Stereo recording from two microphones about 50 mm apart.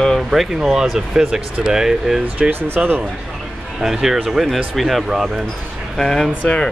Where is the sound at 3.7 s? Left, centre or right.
Centre.